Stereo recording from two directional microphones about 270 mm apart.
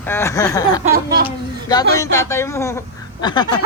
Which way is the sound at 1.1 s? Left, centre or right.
Right.